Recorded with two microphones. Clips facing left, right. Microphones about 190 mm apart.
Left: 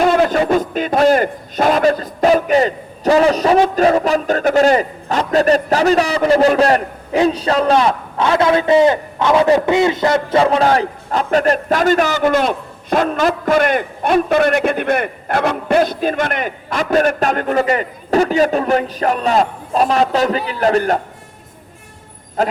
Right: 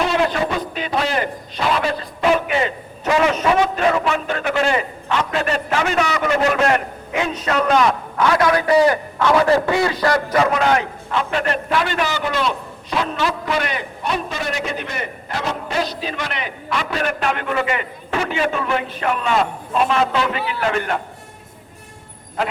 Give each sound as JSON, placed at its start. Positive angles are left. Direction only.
{"t": 0.0, "sound": "speech", "side_deg": 45}